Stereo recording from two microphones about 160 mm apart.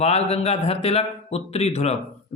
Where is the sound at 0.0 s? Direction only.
40° left (ahead or behind).